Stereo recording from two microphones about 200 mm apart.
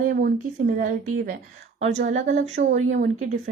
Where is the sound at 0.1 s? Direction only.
45° right (ahead or behind).